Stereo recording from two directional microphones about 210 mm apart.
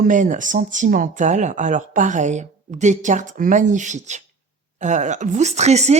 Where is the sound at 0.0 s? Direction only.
35° right (ahead or behind).